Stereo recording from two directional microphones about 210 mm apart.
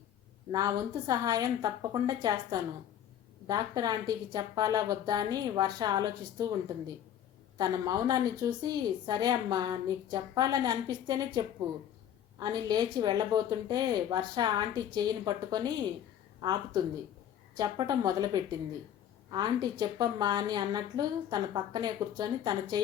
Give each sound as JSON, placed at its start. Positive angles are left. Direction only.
{"t": 0.5, "sound": "a woman's voice", "side_deg": -15}